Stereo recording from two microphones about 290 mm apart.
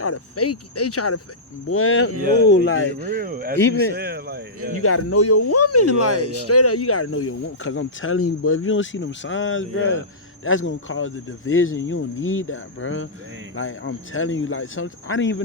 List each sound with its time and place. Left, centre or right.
0.0 s speech: left
2.9 s speech: right
4.8 s speech: left